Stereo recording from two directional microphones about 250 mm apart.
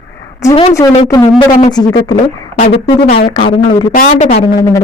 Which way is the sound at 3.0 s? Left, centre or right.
Left.